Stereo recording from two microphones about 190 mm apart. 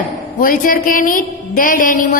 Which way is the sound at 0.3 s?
45° left (ahead or behind).